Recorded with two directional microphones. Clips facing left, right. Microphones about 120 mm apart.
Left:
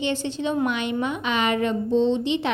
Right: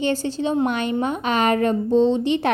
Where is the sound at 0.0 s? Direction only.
40° right (ahead or behind).